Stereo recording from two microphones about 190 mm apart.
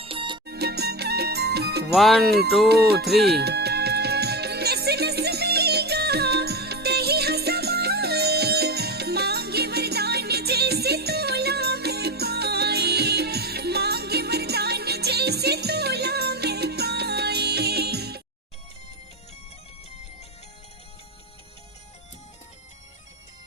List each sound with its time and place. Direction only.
0.0 s music: 30° right (ahead or behind)
0.4 s music: 60° right (ahead or behind)
1.9 s speech: centre (ahead or behind)
2.6 s music: 55° right (ahead or behind)